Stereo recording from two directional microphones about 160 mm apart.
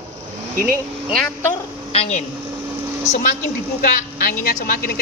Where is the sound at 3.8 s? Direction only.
65° left (ahead or behind).